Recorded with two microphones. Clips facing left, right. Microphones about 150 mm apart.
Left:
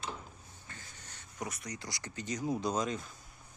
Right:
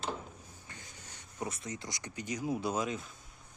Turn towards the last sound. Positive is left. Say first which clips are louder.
# even
turn(degrees=-5)  # may be behind; listen again after turning